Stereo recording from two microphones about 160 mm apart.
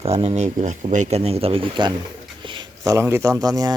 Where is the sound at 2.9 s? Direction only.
15° right (ahead or behind).